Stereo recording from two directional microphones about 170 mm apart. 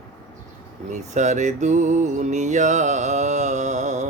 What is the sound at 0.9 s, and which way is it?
Mantra, 45° right (ahead or behind).